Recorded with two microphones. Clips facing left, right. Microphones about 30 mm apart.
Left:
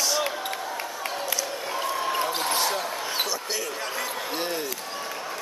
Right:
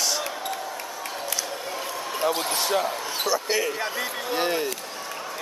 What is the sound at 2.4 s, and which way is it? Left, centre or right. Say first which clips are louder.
Basketball bounce: left 2 dB; centre.